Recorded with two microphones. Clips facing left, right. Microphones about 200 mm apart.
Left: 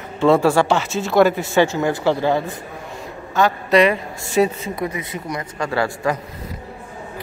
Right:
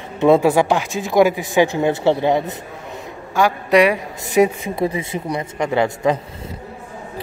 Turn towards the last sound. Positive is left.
turn(degrees=-20)  # may be behind; listen again after turning